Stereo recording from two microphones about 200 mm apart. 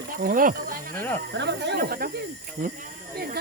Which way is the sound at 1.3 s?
60° right (ahead or behind).